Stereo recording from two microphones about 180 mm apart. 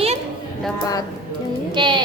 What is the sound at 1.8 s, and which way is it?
Speech, 25° right (ahead or behind).